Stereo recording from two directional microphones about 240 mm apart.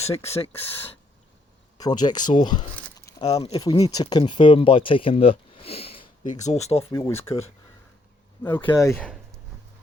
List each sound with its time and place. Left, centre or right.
0.0 s speech: left
1.8 s speech: centre
2.7 s a sound: centre
3.2 s speech: left
6.9 s speech: centre
8.6 s speech: centre